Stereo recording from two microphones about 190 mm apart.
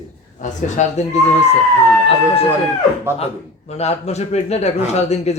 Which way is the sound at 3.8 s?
35° left (ahead or behind).